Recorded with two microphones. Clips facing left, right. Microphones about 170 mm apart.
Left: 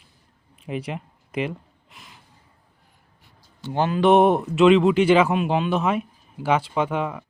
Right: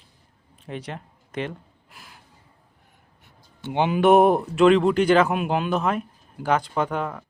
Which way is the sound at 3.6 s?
20° right (ahead or behind).